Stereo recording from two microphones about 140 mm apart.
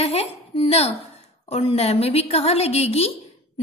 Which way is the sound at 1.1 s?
45° left (ahead or behind).